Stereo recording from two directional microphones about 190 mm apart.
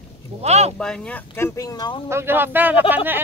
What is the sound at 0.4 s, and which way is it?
Speech, 35° right (ahead or behind).